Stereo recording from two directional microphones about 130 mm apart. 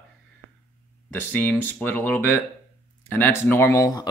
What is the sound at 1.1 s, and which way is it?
Speech, 15° left (ahead or behind).